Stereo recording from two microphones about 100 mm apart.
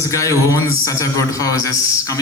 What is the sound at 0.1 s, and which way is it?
A man's voice, 30° left (ahead or behind).